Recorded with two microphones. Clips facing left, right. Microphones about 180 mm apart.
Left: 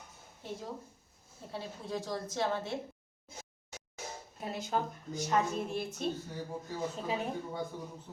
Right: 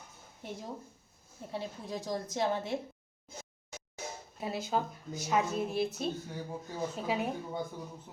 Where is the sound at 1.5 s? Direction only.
15° right (ahead or behind).